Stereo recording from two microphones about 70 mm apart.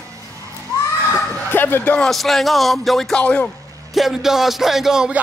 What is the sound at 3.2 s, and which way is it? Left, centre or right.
Speech, centre.